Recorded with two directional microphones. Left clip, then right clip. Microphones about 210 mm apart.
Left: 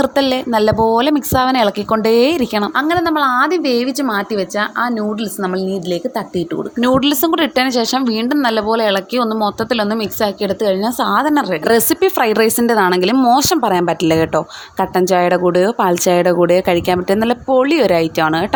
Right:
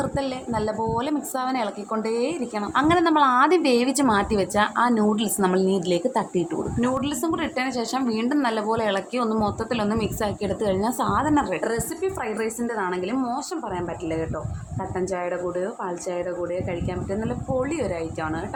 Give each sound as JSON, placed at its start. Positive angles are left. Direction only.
{"t": 0.0, "sound": "a woman's voice", "side_deg": 40}
{"t": 2.7, "sound": "a woman's voice", "side_deg": 15}
{"t": 6.7, "sound": "a woman's voice", "side_deg": 35}
{"t": 11.6, "sound": "a woman's voice", "side_deg": 45}